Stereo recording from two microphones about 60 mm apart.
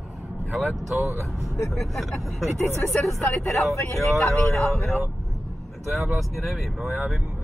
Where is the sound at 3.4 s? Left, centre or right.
Left.